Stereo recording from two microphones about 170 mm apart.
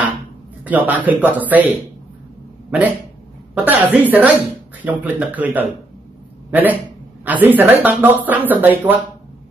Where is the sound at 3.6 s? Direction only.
10° right (ahead or behind).